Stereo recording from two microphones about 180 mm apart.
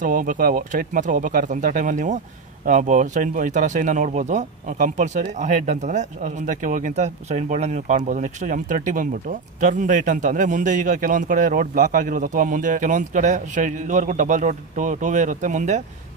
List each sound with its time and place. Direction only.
0.0 s speech: 50° right (ahead or behind)